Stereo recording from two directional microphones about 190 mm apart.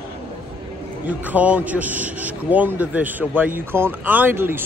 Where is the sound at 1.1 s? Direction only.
10° right (ahead or behind).